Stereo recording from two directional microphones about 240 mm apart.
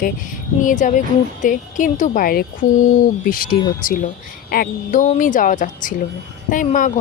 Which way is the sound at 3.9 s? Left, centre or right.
Left.